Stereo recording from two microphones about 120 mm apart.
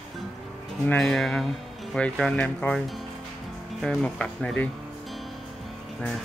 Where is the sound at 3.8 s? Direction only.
5° left (ahead or behind).